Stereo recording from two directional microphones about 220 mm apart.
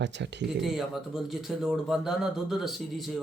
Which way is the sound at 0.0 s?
50° right (ahead or behind).